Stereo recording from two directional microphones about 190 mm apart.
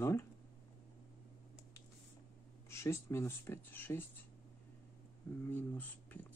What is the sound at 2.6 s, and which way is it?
Speech, 15° left (ahead or behind).